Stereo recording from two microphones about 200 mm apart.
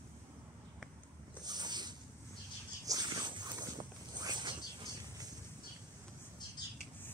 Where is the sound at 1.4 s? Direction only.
20° right (ahead or behind).